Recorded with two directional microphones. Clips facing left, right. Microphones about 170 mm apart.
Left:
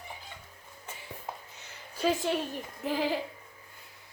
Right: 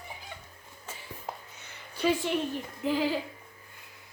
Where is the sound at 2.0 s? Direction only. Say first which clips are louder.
Right 1 dB; 40° left (ahead or behind).